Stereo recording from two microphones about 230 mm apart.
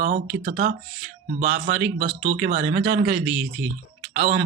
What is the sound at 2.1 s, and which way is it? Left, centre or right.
Speech, right.